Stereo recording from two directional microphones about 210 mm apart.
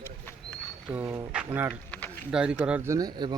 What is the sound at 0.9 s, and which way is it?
Speech, 5° right (ahead or behind).